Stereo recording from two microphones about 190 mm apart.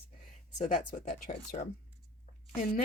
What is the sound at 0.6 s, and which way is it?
Speech, 30° left (ahead or behind).